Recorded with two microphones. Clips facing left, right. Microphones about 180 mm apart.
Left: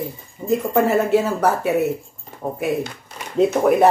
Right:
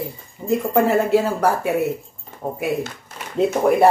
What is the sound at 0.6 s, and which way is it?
A woman's voice, 10° right (ahead or behind).